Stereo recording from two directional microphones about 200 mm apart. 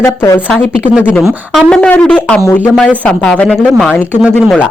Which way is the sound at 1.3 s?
10° right (ahead or behind).